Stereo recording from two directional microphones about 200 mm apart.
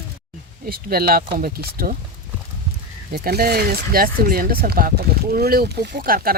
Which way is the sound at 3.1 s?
50° right (ahead or behind).